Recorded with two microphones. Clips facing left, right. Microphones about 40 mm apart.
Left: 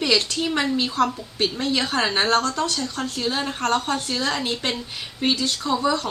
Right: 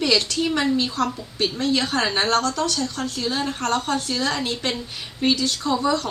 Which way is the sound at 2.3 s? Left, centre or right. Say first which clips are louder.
Even; left.